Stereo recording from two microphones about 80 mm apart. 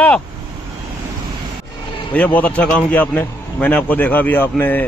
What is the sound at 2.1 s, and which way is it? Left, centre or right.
A man's voice, centre.